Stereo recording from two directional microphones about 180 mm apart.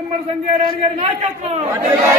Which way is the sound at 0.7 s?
35° right (ahead or behind).